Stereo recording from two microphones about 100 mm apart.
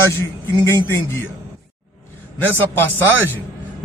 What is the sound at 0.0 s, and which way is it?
Speech, 25° left (ahead or behind).